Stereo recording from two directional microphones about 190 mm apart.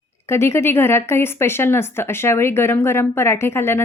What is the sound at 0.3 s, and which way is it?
Speech, 15° left (ahead or behind).